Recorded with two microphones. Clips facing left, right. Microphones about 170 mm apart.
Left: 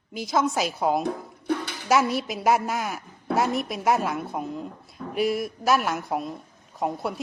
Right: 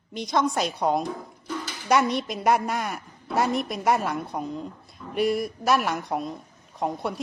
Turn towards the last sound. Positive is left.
turn(degrees=0)  # may be behind; listen again after turning